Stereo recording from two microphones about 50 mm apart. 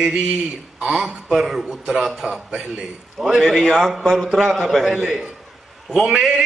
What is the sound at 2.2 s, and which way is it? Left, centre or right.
Speech, centre.